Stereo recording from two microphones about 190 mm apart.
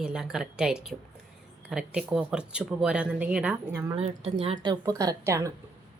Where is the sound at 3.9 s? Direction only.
30° right (ahead or behind); by 5.5 s 15° right (ahead or behind).